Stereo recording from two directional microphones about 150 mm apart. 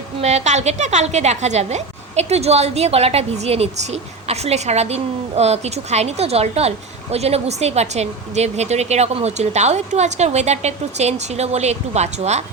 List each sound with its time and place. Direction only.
0.2 s a woman's voice: 50° right (ahead or behind)